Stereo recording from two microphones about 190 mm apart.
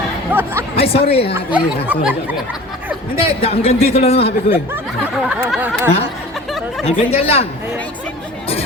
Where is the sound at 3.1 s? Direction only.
30° left (ahead or behind).